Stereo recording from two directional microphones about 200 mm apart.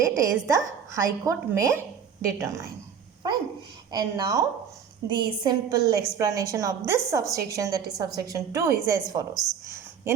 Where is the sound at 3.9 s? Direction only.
15° right (ahead or behind).